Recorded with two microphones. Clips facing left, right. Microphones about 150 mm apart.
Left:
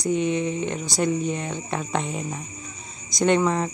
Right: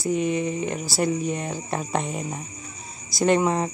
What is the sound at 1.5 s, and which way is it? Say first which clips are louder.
Speech: even; 35° right (ahead or behind).